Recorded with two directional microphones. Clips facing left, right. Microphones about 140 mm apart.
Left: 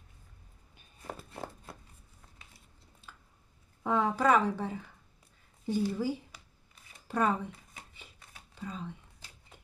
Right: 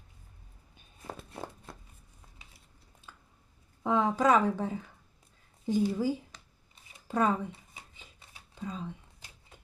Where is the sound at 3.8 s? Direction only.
15° right (ahead or behind).